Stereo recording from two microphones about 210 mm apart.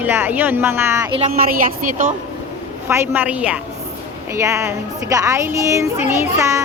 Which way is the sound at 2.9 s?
10° right (ahead or behind).